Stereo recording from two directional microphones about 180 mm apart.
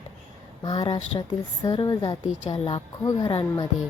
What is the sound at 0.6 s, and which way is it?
A woman's voice, 25° left (ahead or behind).